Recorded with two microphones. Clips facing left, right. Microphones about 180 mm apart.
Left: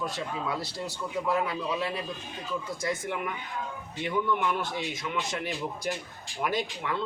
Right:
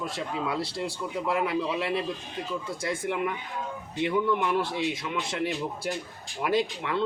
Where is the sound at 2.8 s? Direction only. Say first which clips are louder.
Right 4 dB; 30° right (ahead or behind).